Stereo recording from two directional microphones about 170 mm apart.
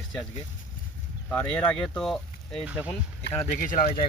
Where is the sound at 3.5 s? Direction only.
55° left (ahead or behind).